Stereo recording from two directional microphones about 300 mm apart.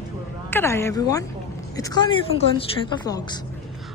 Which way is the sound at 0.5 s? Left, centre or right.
Centre.